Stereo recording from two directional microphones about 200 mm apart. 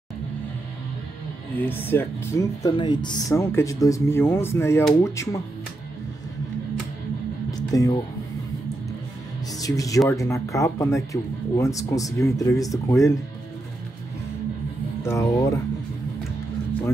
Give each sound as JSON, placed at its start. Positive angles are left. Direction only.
{"t": 1.6, "sound": "speech", "side_deg": 10}
{"t": 7.5, "sound": "music", "side_deg": 20}
{"t": 9.6, "sound": "speech", "side_deg": 15}
{"t": 15.0, "sound": "speech", "side_deg": 15}